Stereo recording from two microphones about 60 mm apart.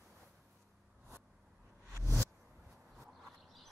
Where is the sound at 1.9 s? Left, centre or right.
Right.